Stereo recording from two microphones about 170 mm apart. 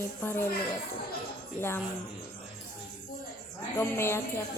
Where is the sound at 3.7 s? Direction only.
15° left (ahead or behind).